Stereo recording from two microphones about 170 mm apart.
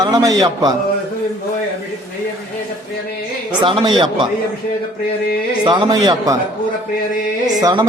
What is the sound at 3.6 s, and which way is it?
Speech, 30° right (ahead or behind).